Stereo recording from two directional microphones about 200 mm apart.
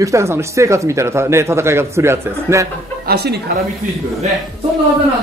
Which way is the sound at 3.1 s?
55° right (ahead or behind).